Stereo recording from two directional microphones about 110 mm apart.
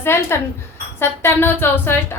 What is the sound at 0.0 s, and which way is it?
Speech, 20° left (ahead or behind).